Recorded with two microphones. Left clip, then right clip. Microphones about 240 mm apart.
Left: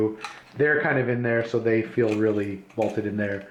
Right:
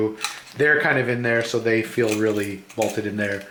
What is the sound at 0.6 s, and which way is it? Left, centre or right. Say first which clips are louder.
Speech: right 3 dB; centre.